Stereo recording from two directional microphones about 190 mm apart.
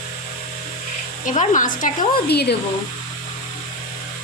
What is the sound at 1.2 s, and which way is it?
Speech, 40° left (ahead or behind).